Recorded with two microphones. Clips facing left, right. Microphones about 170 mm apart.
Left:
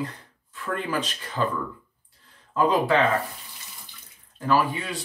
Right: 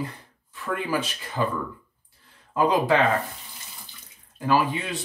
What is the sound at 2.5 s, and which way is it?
Speech, 15° right (ahead or behind).